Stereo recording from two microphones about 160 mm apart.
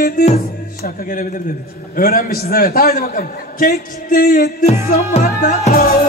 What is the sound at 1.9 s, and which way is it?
A man's voice, 65° left (ahead or behind).